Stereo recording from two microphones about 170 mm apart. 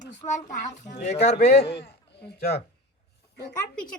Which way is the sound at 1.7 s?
80° left.